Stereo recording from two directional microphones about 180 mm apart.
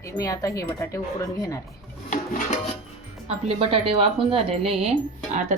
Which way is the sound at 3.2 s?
30° right (ahead or behind).